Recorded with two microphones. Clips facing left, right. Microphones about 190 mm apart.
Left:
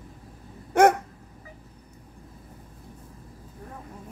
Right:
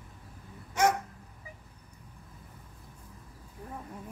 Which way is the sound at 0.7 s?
60° left (ahead or behind).